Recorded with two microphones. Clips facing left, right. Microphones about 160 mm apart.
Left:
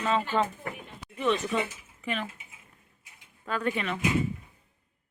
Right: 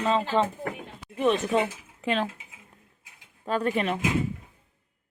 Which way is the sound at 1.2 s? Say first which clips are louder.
Right 4 dB; 50° right (ahead or behind).